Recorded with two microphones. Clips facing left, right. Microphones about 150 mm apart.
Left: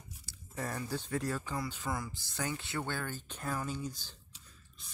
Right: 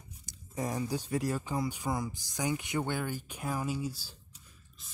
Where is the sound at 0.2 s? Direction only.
15° right (ahead or behind).